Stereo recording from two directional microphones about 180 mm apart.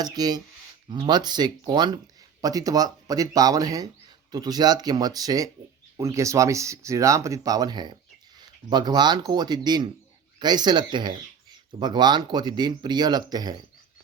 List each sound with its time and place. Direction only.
0.0 s speech: 20° right (ahead or behind)